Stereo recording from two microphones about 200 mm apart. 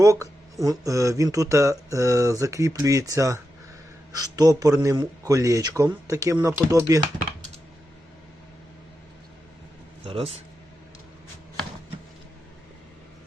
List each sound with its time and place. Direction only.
0.0 s speech: 15° right (ahead or behind)
10.0 s speech: 30° right (ahead or behind)